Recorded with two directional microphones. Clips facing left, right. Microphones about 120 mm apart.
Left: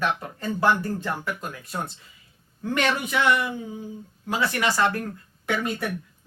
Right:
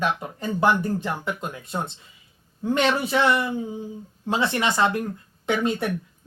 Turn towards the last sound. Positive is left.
turn(degrees=-20)  # may be behind; listen again after turning